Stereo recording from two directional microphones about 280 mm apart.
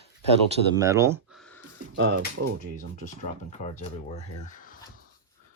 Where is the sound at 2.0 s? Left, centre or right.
Right.